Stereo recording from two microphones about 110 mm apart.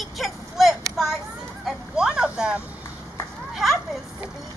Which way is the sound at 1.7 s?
5° right (ahead or behind).